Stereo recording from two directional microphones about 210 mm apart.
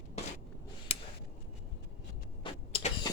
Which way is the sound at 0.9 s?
25° left (ahead or behind).